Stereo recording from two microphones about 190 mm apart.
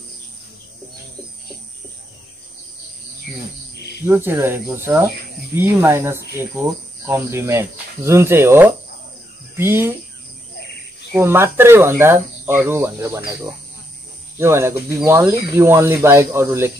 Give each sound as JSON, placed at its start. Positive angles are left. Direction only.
{"t": 4.0, "sound": "speech", "side_deg": -10}
{"t": 11.1, "sound": "speech", "side_deg": -10}
{"t": 14.4, "sound": "speech", "side_deg": -15}